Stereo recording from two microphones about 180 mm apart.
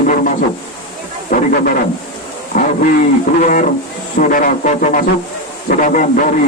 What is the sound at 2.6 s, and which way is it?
A man's voice, 45° left (ahead or behind).